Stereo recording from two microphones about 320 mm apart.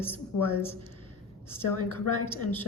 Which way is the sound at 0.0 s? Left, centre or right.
Centre.